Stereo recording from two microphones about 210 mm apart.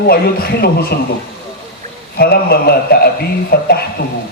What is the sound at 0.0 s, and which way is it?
Speech, 45° left (ahead or behind).